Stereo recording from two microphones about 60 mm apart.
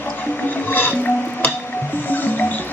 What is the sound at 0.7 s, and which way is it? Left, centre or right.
Music, left.